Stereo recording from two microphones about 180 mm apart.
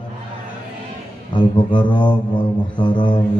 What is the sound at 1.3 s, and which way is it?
A man's voice, 25° left (ahead or behind).